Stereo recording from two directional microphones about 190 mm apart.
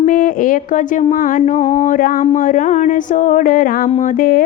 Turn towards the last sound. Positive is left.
turn(degrees=45)  # may be behind; listen again after turning